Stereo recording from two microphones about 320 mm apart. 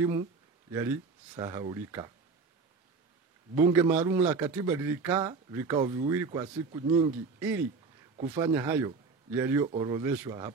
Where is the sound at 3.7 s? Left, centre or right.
Centre.